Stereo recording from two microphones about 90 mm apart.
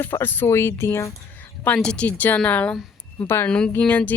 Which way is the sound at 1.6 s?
15° left (ahead or behind).